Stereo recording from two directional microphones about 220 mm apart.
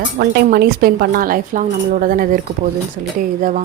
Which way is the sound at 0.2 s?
45° right (ahead or behind).